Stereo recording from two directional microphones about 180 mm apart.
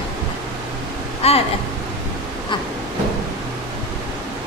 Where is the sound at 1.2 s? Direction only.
35° left (ahead or behind).